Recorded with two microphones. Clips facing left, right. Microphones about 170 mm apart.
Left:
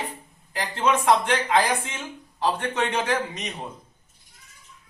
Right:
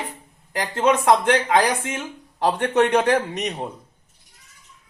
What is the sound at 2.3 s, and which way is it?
A man's voice, 70° right (ahead or behind).